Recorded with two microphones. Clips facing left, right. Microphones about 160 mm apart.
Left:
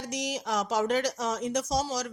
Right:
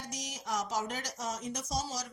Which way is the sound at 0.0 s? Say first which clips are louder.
Left 10 dB; 75° left (ahead or behind).